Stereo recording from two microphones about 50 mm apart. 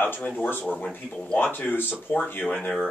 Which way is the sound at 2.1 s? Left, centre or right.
Left.